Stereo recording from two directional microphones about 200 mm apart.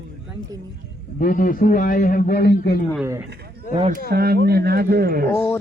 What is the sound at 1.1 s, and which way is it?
A man's voice, 45° left (ahead or behind).